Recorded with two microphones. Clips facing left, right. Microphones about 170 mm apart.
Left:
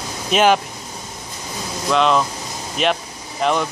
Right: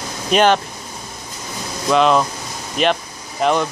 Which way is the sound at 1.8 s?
Centre (ahead or behind).